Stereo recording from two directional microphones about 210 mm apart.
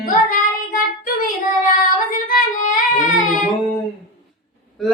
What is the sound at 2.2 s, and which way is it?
Singing, 40° left (ahead or behind).